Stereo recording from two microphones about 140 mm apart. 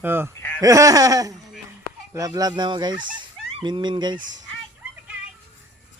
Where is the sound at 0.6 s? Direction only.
25° right (ahead or behind).